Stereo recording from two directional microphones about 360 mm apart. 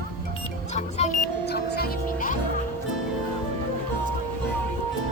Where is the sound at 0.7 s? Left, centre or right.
Centre.